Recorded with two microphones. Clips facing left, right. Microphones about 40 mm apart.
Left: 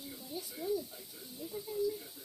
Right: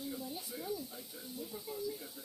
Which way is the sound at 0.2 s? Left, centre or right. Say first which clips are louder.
Right 1 dB; right.